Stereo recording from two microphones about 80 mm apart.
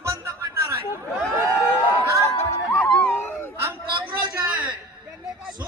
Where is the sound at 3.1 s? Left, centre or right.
Left.